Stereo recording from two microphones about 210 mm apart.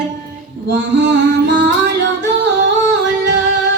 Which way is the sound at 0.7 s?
60° right (ahead or behind).